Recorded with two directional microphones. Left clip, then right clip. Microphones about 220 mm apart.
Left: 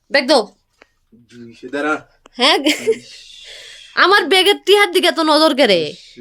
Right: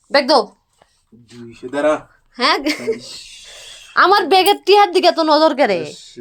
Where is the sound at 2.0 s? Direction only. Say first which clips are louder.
Left 2 dB; 15° left (ahead or behind).